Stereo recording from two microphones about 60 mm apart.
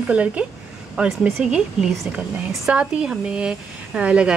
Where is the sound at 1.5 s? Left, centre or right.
Centre.